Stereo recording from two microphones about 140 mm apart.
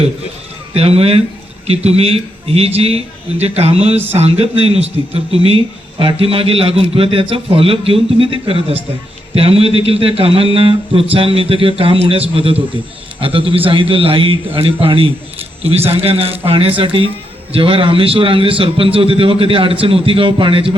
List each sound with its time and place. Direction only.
0.7 s a man's voice: 45° right (ahead or behind)